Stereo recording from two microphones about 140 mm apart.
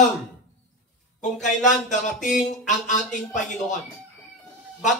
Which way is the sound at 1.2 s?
60° left (ahead or behind).